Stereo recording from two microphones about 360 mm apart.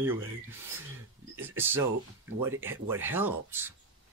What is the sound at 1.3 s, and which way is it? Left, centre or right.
Speech, centre.